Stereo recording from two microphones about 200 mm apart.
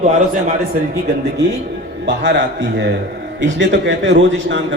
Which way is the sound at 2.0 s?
60° right (ahead or behind).